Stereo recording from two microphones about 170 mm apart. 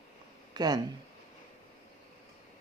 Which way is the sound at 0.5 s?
25° right (ahead or behind).